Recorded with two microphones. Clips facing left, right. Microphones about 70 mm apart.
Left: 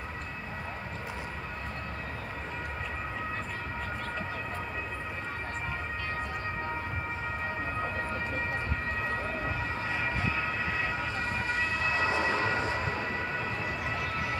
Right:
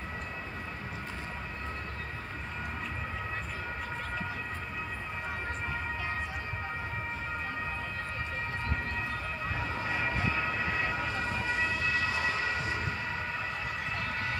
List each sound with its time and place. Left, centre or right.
9.8 s emergency vehicle: centre